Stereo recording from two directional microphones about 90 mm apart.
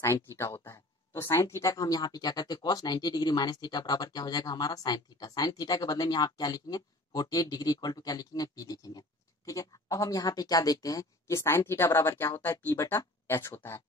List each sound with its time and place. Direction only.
0.0 s a woman's voice: 30° left (ahead or behind)